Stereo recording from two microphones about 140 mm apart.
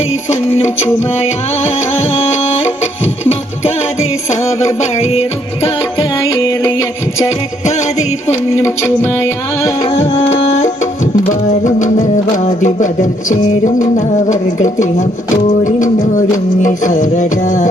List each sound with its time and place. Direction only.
0.3 s music: 50° left (ahead or behind)
6.2 s music: 25° left (ahead or behind)
7.6 s music: 55° left (ahead or behind)
8.5 s music: 20° left (ahead or behind)
9.8 s tabla: 40° left (ahead or behind)
11.3 s music: 60° left (ahead or behind)